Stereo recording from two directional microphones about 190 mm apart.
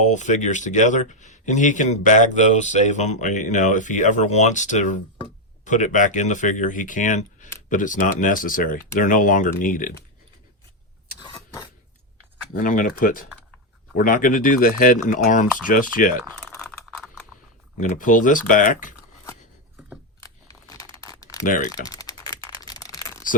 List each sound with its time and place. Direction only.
0.0 s speech: 40° left (ahead or behind)
11.2 s vehicle: 25° left (ahead or behind)
12.5 s speech: 45° left (ahead or behind)
16.6 s a sound: centre (ahead or behind)
17.7 s speech: 40° left (ahead or behind)
20.2 s crumpling: 15° left (ahead or behind)
21.4 s speech: 45° left (ahead or behind)
21.7 s typing: 20° left (ahead or behind)